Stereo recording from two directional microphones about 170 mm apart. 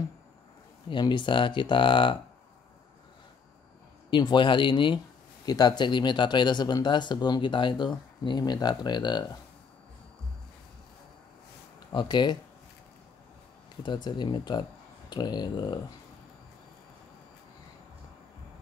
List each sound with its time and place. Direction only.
0.8 s speech: 30° left (ahead or behind)
4.1 s speech: 30° left (ahead or behind)
11.9 s speech: 25° left (ahead or behind)
13.8 s speech: 25° left (ahead or behind)